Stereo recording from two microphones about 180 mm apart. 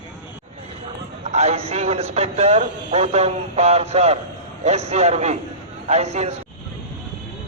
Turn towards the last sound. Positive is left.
turn(degrees=-35)  # may be behind; listen again after turning